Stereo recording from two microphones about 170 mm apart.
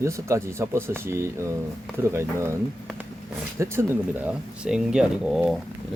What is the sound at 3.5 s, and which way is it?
Speech, 15° right (ahead or behind).